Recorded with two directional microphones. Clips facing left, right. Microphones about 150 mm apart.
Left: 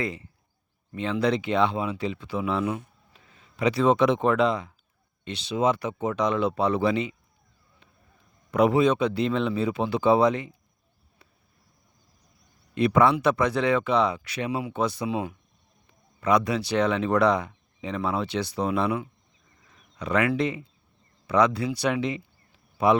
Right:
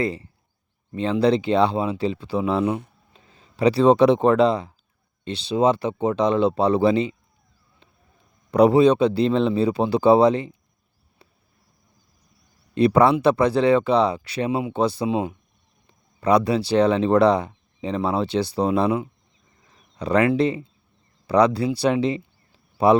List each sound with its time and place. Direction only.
0.0 s speech: 35° right (ahead or behind)
8.4 s speech: 35° right (ahead or behind)
12.7 s speech: 35° right (ahead or behind)